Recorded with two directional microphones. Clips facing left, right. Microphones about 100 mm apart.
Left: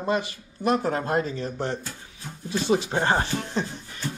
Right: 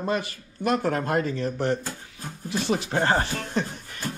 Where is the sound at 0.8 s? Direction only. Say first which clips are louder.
Even; 25° left (ahead or behind).